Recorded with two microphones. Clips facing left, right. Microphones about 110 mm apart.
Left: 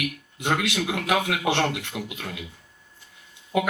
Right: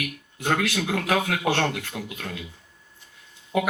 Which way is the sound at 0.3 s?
20° left (ahead or behind).